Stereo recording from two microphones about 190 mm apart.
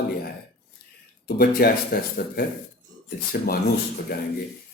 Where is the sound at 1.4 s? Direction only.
50° left (ahead or behind).